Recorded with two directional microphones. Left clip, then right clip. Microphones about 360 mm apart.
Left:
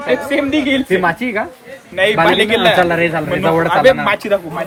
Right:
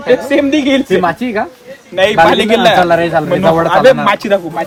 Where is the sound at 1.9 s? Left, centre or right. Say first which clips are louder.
Right 4 dB; centre.